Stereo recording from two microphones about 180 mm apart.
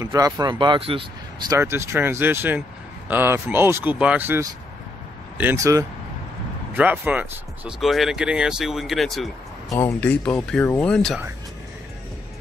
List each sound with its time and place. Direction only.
0.0 s speech: 20° right (ahead or behind)
1.5 s speech: 15° right (ahead or behind); by 11.1 s 5° left (ahead or behind)